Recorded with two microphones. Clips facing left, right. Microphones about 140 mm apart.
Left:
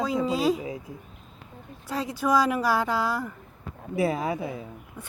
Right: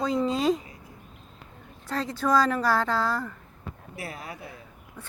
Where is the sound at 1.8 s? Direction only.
10° left (ahead or behind).